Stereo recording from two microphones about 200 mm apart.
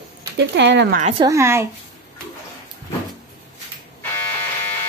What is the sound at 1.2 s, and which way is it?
Speech, 15° right (ahead or behind).